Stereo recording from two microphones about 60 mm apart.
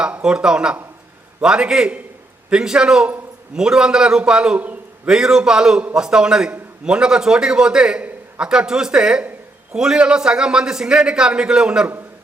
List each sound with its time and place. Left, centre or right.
0.0 s a man's voice: centre